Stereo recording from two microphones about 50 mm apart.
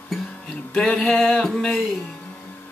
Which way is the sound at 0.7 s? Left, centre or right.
Centre.